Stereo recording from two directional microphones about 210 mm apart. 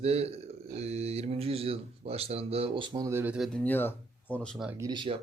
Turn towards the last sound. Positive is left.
turn(degrees=-20)  # may be behind; listen again after turning